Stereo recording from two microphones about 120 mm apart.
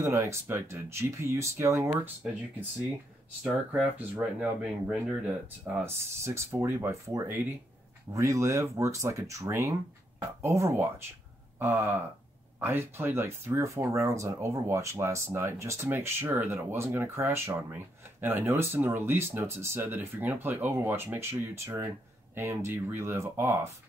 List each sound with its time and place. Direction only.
0.0 s speech: 25° right (ahead or behind)
3.7 s speech: 15° right (ahead or behind)